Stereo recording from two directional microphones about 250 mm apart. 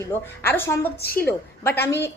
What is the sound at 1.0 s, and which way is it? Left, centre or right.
Speech, left.